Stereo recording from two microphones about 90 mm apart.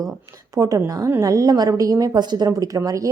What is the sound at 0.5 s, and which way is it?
A woman's voice, 40° right (ahead or behind).